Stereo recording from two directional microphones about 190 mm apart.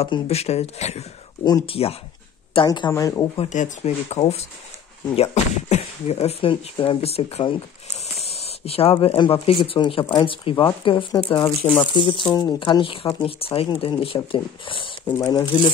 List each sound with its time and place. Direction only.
0.0 s speech: 35° left (ahead or behind); by 3.3 s 15° left (ahead or behind)
3.3 s speech: 40° left (ahead or behind)
11.4 s speech: 10° left (ahead or behind)
11.9 s speech: 25° left (ahead or behind)
15.0 s speech: 15° left (ahead or behind)